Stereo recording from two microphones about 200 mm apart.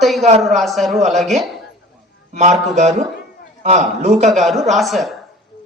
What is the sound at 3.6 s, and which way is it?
Speech, 35° right (ahead or behind).